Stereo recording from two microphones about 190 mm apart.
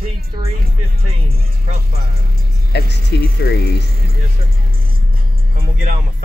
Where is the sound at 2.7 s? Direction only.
60° left (ahead or behind).